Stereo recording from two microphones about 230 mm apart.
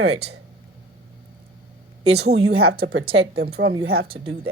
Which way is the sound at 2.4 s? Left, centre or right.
Right.